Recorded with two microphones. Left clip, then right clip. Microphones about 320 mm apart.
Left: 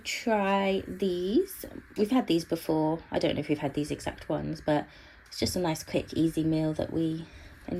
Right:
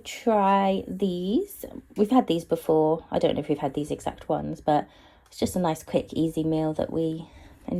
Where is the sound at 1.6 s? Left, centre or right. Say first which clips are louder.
Right 4 dB; right.